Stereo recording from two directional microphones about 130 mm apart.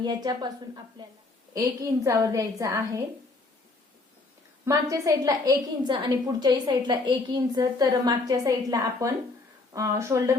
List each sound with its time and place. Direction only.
0.0 s a woman's voice: 35° right (ahead or behind)
2.0 s a woman's voice: 25° right (ahead or behind)
4.6 s a woman's voice: 25° right (ahead or behind)